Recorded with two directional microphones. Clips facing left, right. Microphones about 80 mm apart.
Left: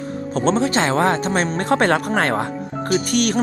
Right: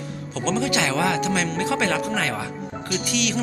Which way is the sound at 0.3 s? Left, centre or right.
Left.